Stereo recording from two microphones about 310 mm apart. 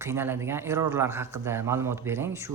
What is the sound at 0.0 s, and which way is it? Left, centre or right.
A man's voice, centre.